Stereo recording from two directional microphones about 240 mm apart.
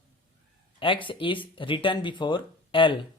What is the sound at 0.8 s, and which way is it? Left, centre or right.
Speech, left.